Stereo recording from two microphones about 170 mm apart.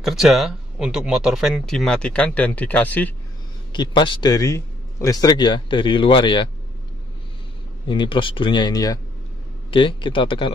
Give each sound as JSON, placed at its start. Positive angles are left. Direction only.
{"t": 0.0, "sound": "speech", "side_deg": 0}
{"t": 3.7, "sound": "speech", "side_deg": 25}
{"t": 7.9, "sound": "speech", "side_deg": 30}